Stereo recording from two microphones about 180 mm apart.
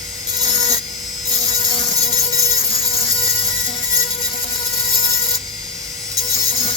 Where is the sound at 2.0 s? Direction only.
35° left (ahead or behind).